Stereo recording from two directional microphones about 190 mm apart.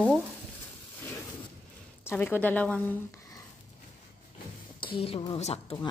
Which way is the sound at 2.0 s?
10° left (ahead or behind).